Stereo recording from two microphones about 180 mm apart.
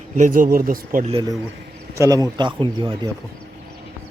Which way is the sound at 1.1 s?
20° right (ahead or behind).